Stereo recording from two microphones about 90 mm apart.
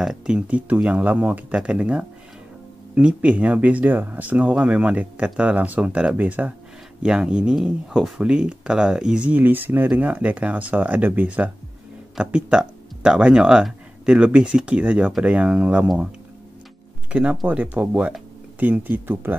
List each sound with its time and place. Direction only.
0.0 s speech: 10° right (ahead or behind)
17.1 s speech: 15° right (ahead or behind)